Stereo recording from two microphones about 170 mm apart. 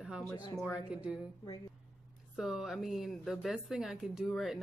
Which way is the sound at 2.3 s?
Centre (ahead or behind).